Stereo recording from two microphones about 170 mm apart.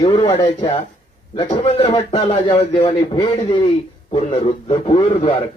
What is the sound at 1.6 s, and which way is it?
A man's voice, 35° left (ahead or behind).